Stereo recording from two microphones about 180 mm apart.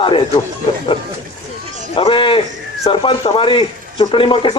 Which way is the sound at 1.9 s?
30° left (ahead or behind).